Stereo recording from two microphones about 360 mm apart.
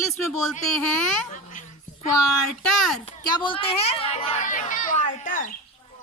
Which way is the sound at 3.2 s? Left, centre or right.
Centre.